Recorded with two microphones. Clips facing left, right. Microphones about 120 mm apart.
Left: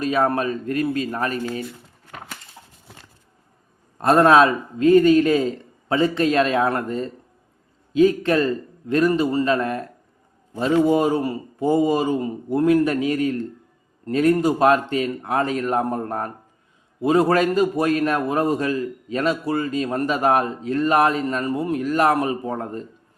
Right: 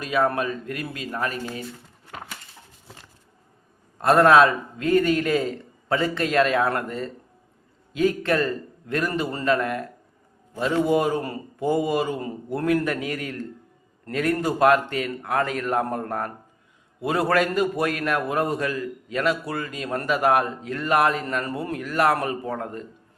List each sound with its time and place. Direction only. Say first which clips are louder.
0.0 s speech: left 3 dB; 35° left (ahead or behind)
4.0 s a man's voice: left 1 dB; 25° left (ahead or behind)